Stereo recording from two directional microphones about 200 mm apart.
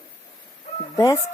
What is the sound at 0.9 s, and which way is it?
Speech, 15° left (ahead or behind).